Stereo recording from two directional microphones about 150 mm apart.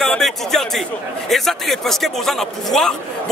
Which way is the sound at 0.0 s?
Centre (ahead or behind).